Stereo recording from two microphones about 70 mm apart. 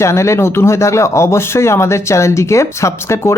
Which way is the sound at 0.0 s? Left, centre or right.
Left.